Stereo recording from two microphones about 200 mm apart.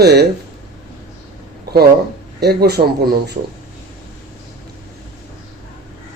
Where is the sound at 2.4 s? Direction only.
55° right (ahead or behind).